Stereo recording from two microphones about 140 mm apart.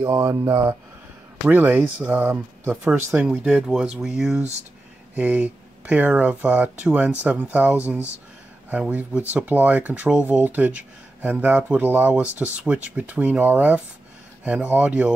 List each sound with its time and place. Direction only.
0.0 s speech: 20° right (ahead or behind)